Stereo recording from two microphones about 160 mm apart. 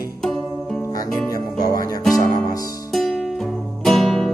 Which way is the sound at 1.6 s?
60° right (ahead or behind).